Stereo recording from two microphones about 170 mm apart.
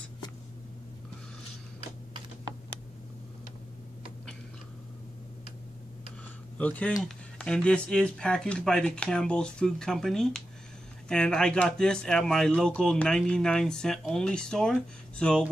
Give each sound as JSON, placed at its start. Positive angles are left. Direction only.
{"t": 6.6, "sound": "speech", "side_deg": 10}